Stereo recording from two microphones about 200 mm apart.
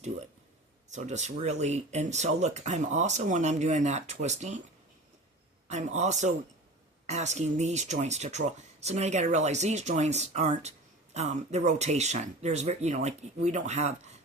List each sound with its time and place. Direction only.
0.9 s speech: 35° right (ahead or behind)
5.6 s speech: 35° right (ahead or behind)